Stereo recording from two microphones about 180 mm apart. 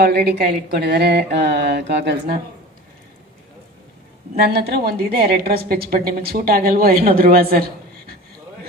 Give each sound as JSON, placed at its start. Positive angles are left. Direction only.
{"t": 0.0, "sound": "a woman's voice", "side_deg": -60}
{"t": 4.4, "sound": "a woman's voice", "side_deg": -60}